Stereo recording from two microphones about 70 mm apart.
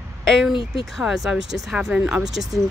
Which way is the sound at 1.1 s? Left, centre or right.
Centre.